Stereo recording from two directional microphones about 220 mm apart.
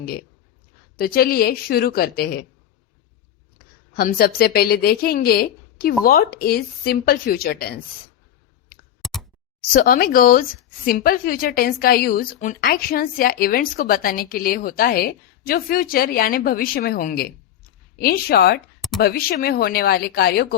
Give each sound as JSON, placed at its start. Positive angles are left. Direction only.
{"t": 0.9, "sound": "a woman's voice", "side_deg": 45}
{"t": 3.9, "sound": "a woman's voice", "side_deg": 40}
{"t": 9.0, "sound": "a sound", "side_deg": 0}
{"t": 9.7, "sound": "a woman's voice", "side_deg": 40}